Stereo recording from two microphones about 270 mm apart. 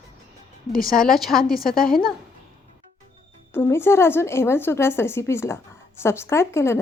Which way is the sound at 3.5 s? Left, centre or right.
Centre.